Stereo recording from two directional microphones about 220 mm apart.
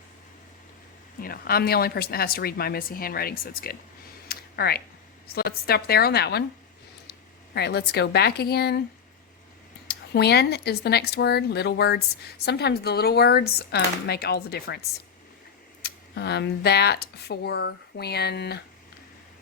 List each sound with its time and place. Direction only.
1.2 s speech: 45° left (ahead or behind)
4.3 s a sound: 45° left (ahead or behind)
5.3 s speech: 45° left (ahead or behind)
7.5 s speech: 50° left (ahead or behind)
10.1 s speech: 50° left (ahead or behind)
15.8 s speech: 50° left (ahead or behind)